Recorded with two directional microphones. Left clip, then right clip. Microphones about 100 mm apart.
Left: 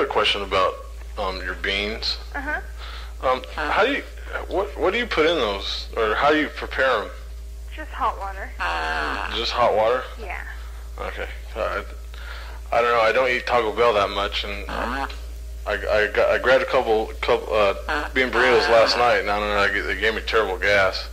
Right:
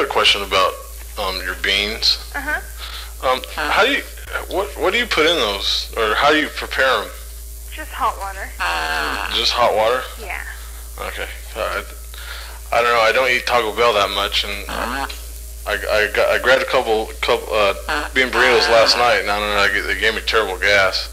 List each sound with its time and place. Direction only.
0.0 s a man's voice: 45° right (ahead or behind)
8.5 s speech: 15° right (ahead or behind)
9.3 s speech: 40° right (ahead or behind)
14.7 s speech: 15° right (ahead or behind)
15.6 s speech: 40° right (ahead or behind)
17.8 s speech: 10° right (ahead or behind)
18.3 s speech: 35° right (ahead or behind)